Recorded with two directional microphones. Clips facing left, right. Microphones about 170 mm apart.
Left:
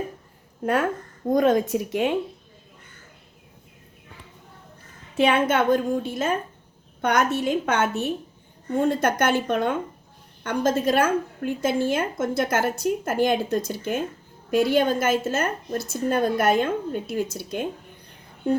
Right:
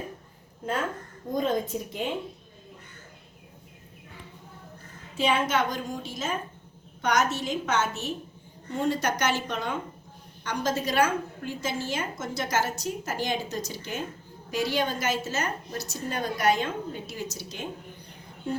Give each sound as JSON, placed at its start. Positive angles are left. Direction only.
{"t": 0.6, "sound": "a woman's voice", "side_deg": 70}
{"t": 5.1, "sound": "a woman's voice", "side_deg": 60}